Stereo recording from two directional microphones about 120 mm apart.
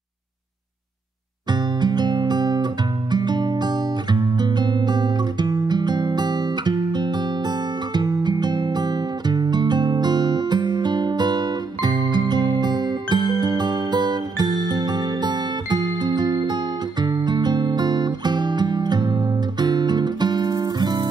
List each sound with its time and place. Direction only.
1.5 s music: 35° right (ahead or behind)